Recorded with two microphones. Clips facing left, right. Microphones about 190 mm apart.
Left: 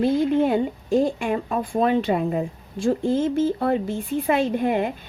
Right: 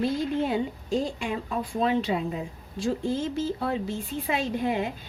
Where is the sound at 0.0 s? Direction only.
55° left (ahead or behind).